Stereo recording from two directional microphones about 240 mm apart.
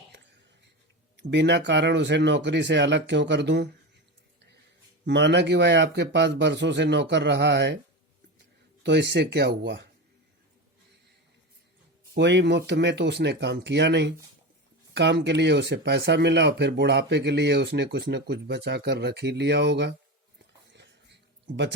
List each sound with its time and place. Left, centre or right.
1.1 s speech: right
5.0 s speech: right
8.8 s speech: right
12.1 s speech: right
20.7 s a sound: right